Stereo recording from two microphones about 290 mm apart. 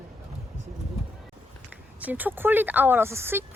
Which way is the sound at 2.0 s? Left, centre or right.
Centre.